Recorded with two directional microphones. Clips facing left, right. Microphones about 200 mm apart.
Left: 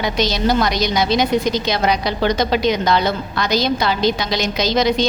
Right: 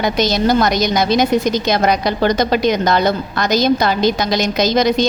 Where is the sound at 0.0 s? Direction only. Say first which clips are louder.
Right 3 dB; 45° right (ahead or behind).